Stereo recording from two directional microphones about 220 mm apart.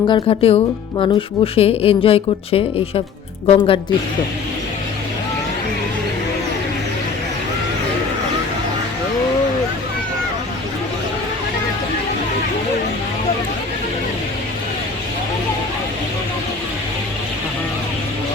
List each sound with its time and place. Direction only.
0.1 s a woman's voice: 25° left (ahead or behind)